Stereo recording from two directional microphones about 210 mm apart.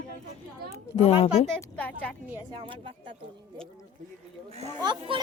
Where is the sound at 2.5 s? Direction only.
25° right (ahead or behind).